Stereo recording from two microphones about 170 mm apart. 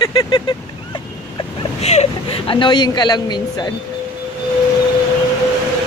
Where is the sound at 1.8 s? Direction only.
40° left (ahead or behind); by 3.7 s 25° left (ahead or behind).